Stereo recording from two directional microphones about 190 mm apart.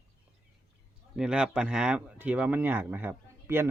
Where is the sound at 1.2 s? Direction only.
5° right (ahead or behind).